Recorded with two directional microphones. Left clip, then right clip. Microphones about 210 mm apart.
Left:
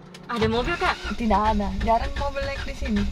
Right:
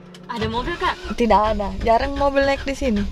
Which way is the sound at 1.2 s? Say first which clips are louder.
Right 7 dB; 50° right (ahead or behind).